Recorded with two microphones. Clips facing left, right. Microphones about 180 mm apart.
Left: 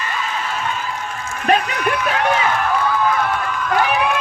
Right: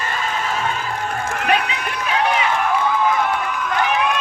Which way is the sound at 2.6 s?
15° right (ahead or behind).